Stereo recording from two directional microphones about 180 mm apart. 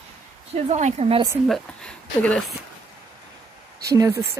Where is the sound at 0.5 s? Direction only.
35° right (ahead or behind).